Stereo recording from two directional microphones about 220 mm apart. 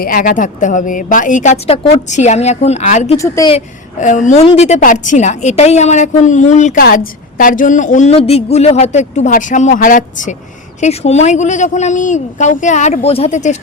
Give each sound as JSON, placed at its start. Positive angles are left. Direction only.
{"t": 0.0, "sound": "a woman's voice", "side_deg": 40}
{"t": 3.2, "sound": "speech", "side_deg": 15}
{"t": 4.0, "sound": "a woman's voice", "side_deg": 35}